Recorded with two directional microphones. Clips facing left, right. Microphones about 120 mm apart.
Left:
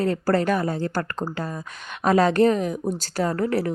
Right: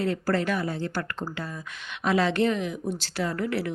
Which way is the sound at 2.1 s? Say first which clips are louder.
Left 6 dB; 45° left (ahead or behind).